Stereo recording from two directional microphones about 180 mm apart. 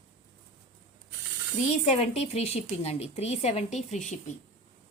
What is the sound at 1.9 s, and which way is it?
Speech, 35° left (ahead or behind).